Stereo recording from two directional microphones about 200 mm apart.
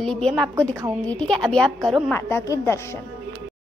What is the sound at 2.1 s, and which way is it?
Speech, 15° left (ahead or behind).